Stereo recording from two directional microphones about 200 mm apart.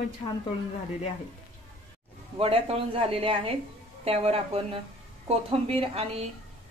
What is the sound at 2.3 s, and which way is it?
A woman's voice, 30° right (ahead or behind).